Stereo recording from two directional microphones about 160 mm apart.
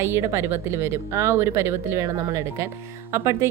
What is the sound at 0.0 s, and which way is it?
A woman's voice, 15° right (ahead or behind).